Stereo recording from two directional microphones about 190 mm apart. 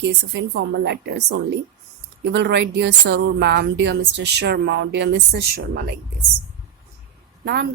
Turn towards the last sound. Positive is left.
turn(degrees=-60)  # may be behind; listen again after turning